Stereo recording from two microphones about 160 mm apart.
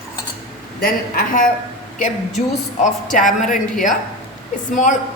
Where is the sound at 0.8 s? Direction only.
60° left (ahead or behind).